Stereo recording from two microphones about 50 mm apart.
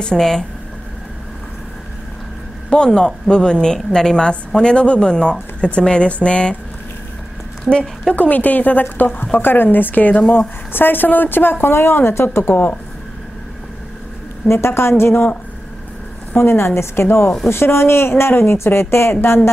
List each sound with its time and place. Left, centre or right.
0.0 s speech: centre
2.7 s speech: centre
8.1 s a woman's voice: left
14.5 s a woman's voice: left
16.3 s a woman's voice: left